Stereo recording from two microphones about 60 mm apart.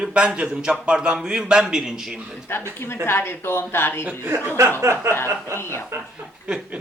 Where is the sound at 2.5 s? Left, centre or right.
Left.